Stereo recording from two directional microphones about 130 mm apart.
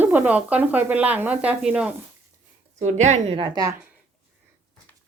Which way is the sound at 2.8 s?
65° right (ahead or behind).